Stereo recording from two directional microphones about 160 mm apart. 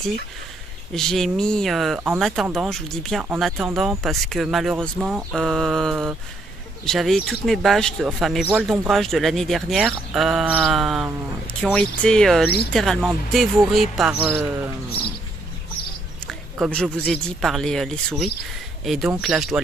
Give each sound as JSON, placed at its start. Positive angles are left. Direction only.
{"t": 0.9, "sound": "speech", "side_deg": 0}
{"t": 12.4, "sound": "speech", "side_deg": 80}
{"t": 12.7, "sound": "speech", "side_deg": 0}
{"t": 16.3, "sound": "speech", "side_deg": 0}